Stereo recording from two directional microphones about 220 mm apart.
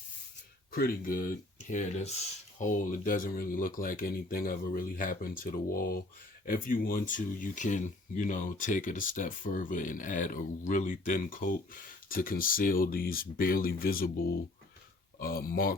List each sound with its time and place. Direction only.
0.7 s speech: 40° left (ahead or behind)
15.2 s speech: 40° left (ahead or behind)